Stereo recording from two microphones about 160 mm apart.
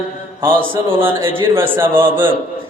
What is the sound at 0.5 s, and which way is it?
Speech, 35° right (ahead or behind).